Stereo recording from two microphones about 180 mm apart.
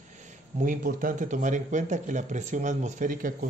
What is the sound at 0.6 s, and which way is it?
Speech, 50° right (ahead or behind).